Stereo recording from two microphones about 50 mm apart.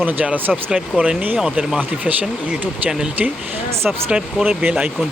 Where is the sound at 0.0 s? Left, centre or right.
Right.